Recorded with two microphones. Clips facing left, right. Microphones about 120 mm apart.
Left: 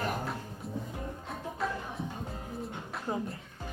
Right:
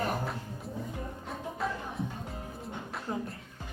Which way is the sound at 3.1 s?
25° left (ahead or behind).